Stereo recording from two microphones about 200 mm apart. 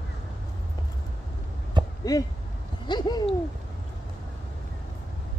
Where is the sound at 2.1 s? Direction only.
20° left (ahead or behind).